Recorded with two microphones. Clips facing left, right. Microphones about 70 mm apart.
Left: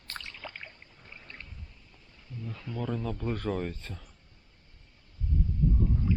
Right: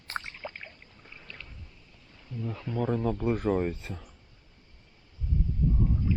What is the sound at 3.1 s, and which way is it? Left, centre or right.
Speech, centre.